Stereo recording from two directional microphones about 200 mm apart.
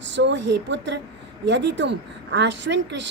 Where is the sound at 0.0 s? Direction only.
60° right (ahead or behind).